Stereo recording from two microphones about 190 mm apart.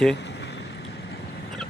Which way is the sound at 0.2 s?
65° left (ahead or behind).